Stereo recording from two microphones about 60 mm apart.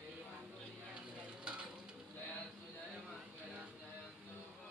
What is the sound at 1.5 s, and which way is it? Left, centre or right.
Stir, centre.